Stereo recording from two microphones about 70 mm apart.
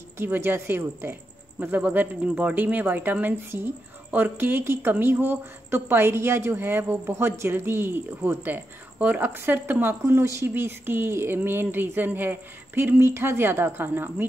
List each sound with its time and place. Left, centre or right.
0.2 s a woman's voice: right
10.2 s speech: right
10.5 s a woman's voice: right